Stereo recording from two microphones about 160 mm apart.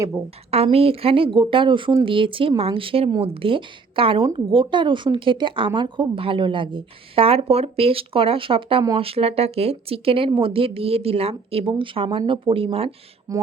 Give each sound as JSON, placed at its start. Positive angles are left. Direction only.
{"t": 0.5, "sound": "a woman's voice", "side_deg": -40}
{"t": 13.3, "sound": "speech", "side_deg": -20}